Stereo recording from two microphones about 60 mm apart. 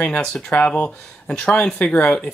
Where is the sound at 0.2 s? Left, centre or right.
Centre.